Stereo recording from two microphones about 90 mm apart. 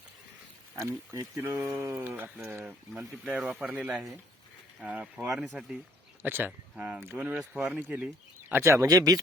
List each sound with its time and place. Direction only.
0.8 s speech: 35° right (ahead or behind)
1.8 s speech: 25° right (ahead or behind)
3.2 s speech: 10° right (ahead or behind)
7.0 s speech: 25° right (ahead or behind)
7.3 s speech: 10° right (ahead or behind); by 9.1 s 40° right (ahead or behind)